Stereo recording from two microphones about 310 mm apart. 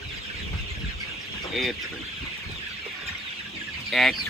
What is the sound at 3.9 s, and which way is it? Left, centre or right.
Speech, centre.